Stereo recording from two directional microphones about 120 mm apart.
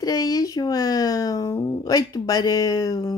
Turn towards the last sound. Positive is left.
turn(degrees=30)  # may be behind; listen again after turning